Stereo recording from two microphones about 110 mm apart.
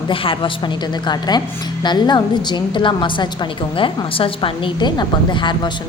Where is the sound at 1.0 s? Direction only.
40° left (ahead or behind).